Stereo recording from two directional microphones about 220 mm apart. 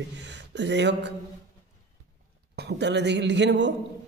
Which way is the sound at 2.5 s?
50° right (ahead or behind).